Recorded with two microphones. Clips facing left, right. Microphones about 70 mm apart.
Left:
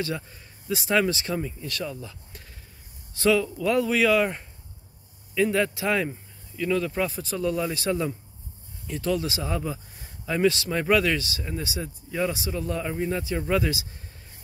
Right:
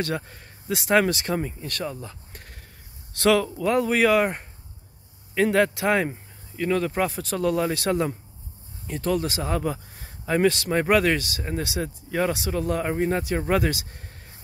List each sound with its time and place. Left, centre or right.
0.0 s speech: right
0.8 s speech: right
3.1 s speech: right
3.4 s speech: right
5.3 s speech: right
7.2 s speech: right